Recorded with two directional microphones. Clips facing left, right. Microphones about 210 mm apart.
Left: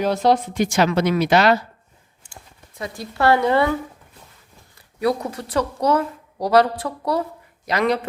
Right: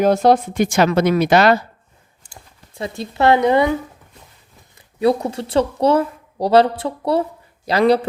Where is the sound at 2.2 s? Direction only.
35° right (ahead or behind); by 3.7 s 20° right (ahead or behind).